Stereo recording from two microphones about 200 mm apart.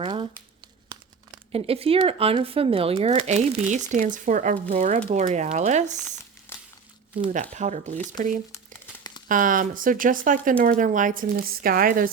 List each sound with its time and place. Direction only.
0.0 s speech: 25° right (ahead or behind)
1.5 s speech: 30° right (ahead or behind)
6.5 s crumpling: 10° left (ahead or behind)
7.5 s speech: 35° right (ahead or behind)
9.3 s speech: 40° right (ahead or behind)